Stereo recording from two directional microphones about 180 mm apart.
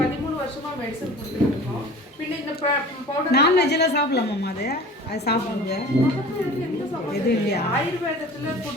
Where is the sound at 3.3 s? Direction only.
65° left (ahead or behind).